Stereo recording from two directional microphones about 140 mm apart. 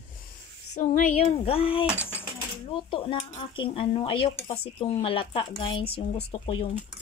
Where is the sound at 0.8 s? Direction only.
65° left (ahead or behind).